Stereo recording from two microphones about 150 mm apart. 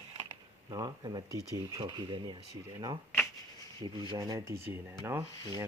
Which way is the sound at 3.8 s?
30° right (ahead or behind).